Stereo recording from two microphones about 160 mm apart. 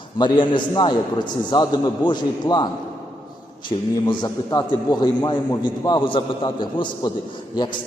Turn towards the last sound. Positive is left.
turn(degrees=30)  # may be behind; listen again after turning